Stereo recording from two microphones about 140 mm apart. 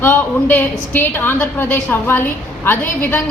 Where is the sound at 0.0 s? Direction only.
15° left (ahead or behind).